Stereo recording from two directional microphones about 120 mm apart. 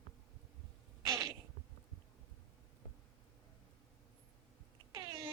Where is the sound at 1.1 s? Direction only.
35° right (ahead or behind).